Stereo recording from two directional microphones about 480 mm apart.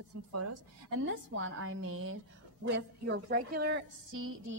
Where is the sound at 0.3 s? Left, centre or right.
Right.